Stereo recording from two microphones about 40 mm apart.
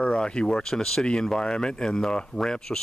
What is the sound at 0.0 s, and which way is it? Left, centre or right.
Speech, left.